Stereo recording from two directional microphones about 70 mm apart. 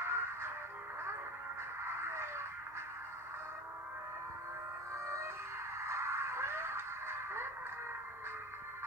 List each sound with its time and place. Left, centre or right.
0.0 s music: right
1.9 s radio: right
4.9 s music: right